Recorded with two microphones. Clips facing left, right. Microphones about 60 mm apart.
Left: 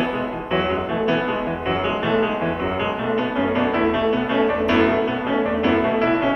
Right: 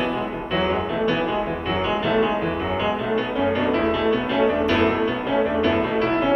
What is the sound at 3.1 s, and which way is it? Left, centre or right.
Music, left.